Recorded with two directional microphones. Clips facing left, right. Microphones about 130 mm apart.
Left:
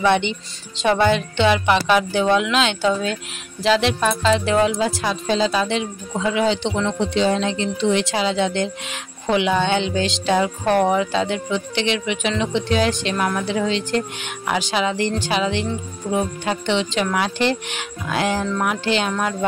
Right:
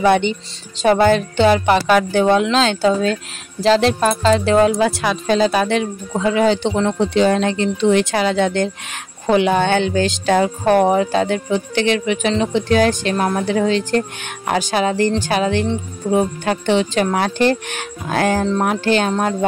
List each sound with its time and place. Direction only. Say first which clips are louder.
0.0 s a woman's voice: right 4 dB; 40° right (ahead or behind)
4.7 s a woman's voice: right 4 dB; 65° right (ahead or behind); by 19.3 s 40° right (ahead or behind)